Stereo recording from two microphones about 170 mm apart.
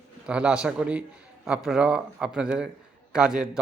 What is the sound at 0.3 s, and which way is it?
A man's voice, 5° right (ahead or behind).